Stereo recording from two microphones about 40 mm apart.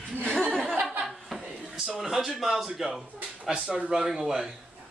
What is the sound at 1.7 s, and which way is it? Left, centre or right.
Speech, centre.